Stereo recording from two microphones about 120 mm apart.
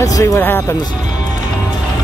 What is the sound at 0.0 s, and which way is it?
Speech, 25° left (ahead or behind).